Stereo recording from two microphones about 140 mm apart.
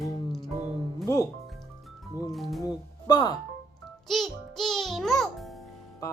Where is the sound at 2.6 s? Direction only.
30° left (ahead or behind).